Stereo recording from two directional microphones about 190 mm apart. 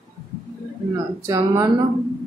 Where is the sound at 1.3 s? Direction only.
20° right (ahead or behind).